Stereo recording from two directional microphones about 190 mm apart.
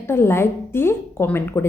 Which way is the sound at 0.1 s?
15° left (ahead or behind).